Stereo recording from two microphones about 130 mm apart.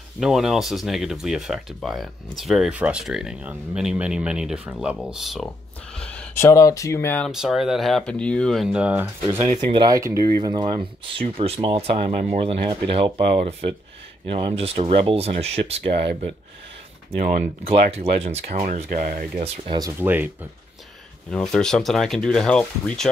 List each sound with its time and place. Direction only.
0.2 s speech: 5° right (ahead or behind)
5.9 s a sound: 10° left (ahead or behind)
6.3 s speech: 20° left (ahead or behind)
7.2 s speech: 5° right (ahead or behind)
8.6 s speech: 10° right (ahead or behind)
9.0 s speech: 20° right (ahead or behind)
9.7 s speech: 35° right (ahead or behind)
9.9 s speech: 25° right (ahead or behind)
10.2 s speech: 35° right (ahead or behind)
17.2 s speech: 55° right (ahead or behind); by 19.2 s 90° right
19.4 s speech: 50° right (ahead or behind)
20.0 s speech: 15° right (ahead or behind)
21.3 s speech: 5° left (ahead or behind)